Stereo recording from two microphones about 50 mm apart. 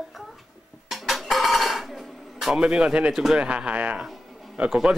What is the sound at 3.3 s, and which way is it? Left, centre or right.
Speech, centre.